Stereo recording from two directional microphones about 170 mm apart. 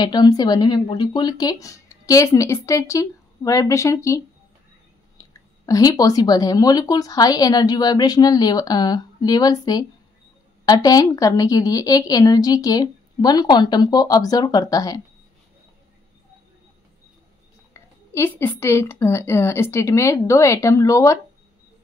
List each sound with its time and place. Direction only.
0.0 s a woman's voice: 25° left (ahead or behind)
5.7 s a woman's voice: 20° left (ahead or behind)
17.7 s a woman's voice: 15° left (ahead or behind)